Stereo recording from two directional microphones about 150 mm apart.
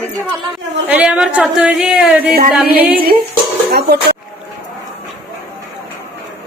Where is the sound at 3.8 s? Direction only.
90° right.